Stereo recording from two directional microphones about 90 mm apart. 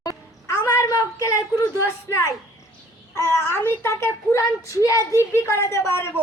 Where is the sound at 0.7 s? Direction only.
35° left (ahead or behind).